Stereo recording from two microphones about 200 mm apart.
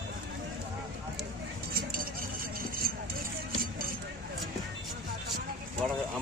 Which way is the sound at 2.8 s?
50° right (ahead or behind).